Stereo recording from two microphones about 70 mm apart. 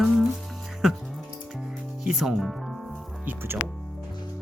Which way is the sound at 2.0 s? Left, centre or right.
Centre.